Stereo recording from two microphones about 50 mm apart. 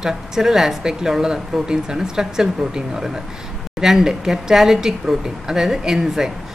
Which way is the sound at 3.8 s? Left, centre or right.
Centre.